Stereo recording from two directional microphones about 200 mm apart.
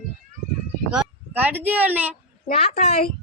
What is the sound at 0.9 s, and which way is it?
Speech, 10° right (ahead or behind).